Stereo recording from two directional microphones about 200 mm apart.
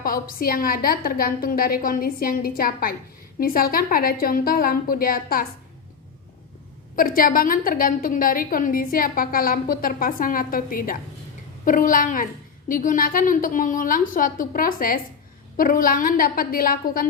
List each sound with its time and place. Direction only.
0.0 s a woman's voice: 45° left (ahead or behind)
6.9 s a woman's voice: 45° left (ahead or behind)